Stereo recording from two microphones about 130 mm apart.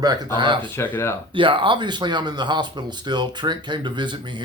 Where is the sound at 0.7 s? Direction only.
15° left (ahead or behind).